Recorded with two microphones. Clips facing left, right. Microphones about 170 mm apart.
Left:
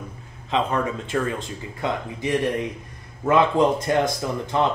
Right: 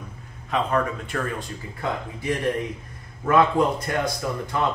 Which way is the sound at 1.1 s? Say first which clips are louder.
Left 4 dB; 20° left (ahead or behind).